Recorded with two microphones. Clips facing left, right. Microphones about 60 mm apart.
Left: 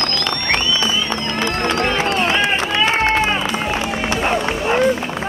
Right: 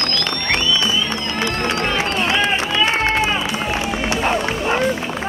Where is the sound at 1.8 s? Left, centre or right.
Left.